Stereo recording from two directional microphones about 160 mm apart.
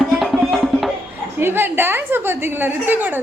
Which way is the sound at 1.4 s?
15° right (ahead or behind).